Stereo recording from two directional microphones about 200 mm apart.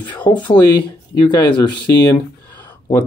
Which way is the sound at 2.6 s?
15° left (ahead or behind).